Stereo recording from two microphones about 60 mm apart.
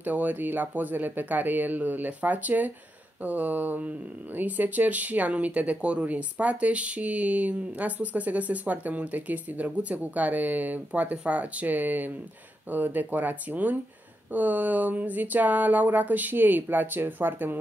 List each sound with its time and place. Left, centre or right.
0.0 s speech: right